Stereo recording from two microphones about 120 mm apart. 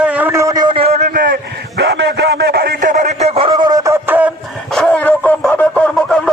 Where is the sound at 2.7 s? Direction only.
90° right; by 3.5 s 55° right (ahead or behind).